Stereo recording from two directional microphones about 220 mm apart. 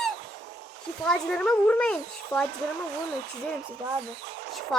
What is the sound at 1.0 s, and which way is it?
Speech, 5° left (ahead or behind).